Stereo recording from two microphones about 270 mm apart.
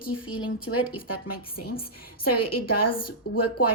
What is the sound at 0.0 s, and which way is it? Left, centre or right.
A woman's voice, left.